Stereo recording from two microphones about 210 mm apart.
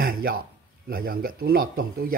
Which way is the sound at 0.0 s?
45° right (ahead or behind).